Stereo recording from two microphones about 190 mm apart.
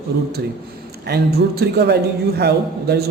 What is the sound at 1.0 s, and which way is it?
A man's voice, 60° right (ahead or behind).